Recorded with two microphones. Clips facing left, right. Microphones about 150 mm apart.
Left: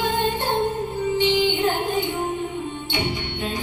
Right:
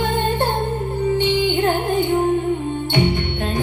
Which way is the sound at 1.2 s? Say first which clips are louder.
Left 1 dB; 55° right (ahead or behind).